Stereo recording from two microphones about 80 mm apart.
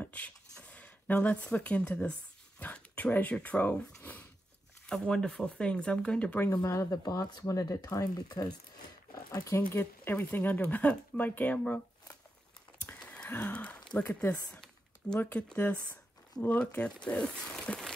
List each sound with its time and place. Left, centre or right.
0.0 s a sound: centre
2.6 s speech: centre
4.8 s speech: centre
6.5 s speech: left
9.7 s speech: left
13.0 s a sound: centre
13.9 s speech: centre